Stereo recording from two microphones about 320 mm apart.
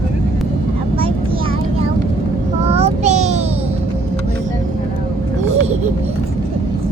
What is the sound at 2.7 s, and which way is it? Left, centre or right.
Child singing, centre.